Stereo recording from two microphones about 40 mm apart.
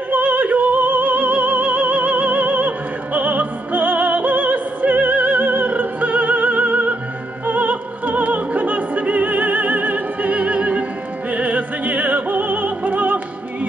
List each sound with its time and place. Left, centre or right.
0.1 s opera: right